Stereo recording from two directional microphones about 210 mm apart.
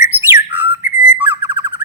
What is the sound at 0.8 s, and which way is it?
Whistle, 40° left (ahead or behind).